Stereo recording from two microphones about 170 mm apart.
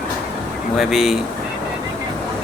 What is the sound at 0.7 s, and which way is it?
Speech, centre (ahead or behind).